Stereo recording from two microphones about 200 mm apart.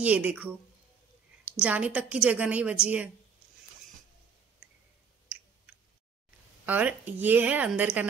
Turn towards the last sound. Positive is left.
turn(degrees=-5)  # may be behind; listen again after turning